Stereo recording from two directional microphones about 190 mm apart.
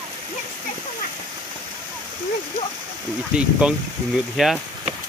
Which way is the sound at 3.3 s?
5° right (ahead or behind).